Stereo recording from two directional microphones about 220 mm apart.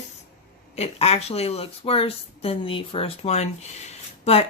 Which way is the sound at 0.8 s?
30° left (ahead or behind).